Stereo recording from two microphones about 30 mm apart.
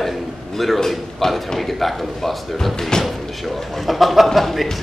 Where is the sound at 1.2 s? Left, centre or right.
Centre.